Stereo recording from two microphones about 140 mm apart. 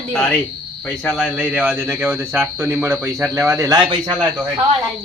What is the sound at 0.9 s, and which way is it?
Speech, centre (ahead or behind).